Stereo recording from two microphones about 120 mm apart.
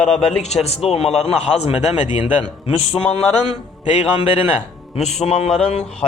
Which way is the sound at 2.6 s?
55° left (ahead or behind).